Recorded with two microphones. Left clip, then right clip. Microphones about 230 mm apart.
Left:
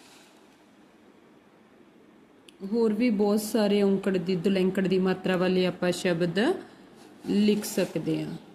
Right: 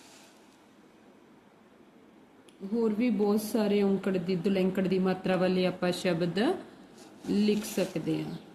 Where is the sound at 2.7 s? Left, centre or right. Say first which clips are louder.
Left 4 dB; left.